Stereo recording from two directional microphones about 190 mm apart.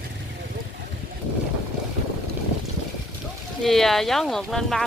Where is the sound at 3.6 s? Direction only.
Centre (ahead or behind).